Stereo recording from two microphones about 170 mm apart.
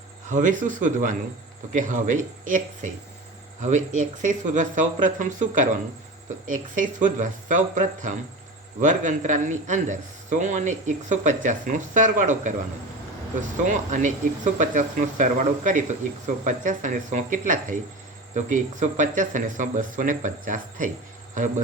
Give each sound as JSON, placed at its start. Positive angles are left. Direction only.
{"t": 0.3, "sound": "a man's voice", "side_deg": -50}
{"t": 13.7, "sound": "a man's voice", "side_deg": -45}